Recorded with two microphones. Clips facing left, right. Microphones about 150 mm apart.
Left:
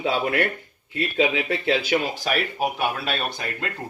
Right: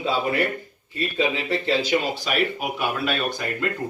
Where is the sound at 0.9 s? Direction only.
80° left.